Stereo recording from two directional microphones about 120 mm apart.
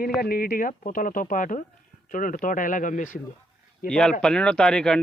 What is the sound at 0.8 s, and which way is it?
Speech, 90° left.